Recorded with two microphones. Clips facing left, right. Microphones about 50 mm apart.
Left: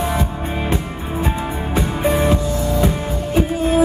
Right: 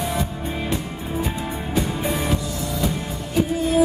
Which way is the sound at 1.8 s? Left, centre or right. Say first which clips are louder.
Left 6 dB; left.